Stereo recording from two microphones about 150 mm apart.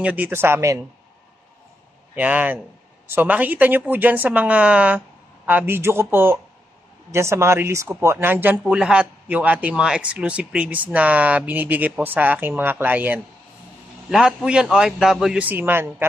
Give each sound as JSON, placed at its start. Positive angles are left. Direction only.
{"t": 0.0, "sound": "speech", "side_deg": -10}
{"t": 2.1, "sound": "a man's voice", "side_deg": -10}